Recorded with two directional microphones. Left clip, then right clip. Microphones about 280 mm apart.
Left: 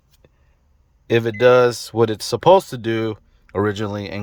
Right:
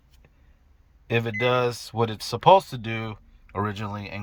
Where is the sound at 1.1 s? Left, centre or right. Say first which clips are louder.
Left 10 dB; centre.